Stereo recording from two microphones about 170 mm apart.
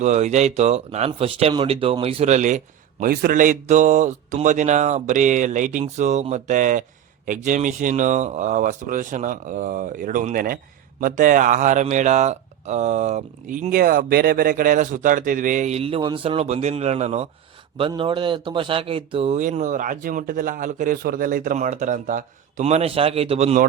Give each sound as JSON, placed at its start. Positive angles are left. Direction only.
{"t": 0.0, "sound": "speech", "side_deg": -45}
{"t": 3.0, "sound": "speech", "side_deg": -55}
{"t": 17.7, "sound": "speech", "side_deg": -30}